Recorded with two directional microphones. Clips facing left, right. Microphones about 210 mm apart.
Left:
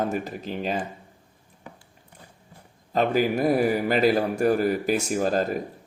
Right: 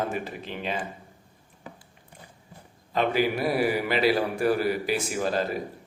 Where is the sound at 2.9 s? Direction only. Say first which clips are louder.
Left 2 dB; 45° left (ahead or behind).